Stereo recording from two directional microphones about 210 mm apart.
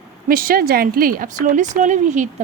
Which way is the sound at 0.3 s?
45° right (ahead or behind).